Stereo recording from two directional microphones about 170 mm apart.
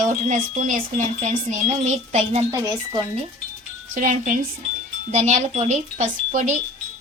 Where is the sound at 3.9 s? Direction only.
50° right (ahead or behind).